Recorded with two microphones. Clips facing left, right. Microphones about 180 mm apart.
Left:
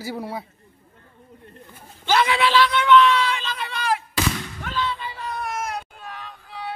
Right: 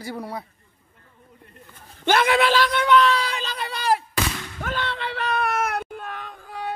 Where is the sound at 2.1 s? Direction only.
50° right (ahead or behind).